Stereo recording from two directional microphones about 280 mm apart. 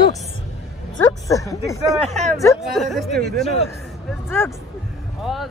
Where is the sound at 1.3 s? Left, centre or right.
Centre.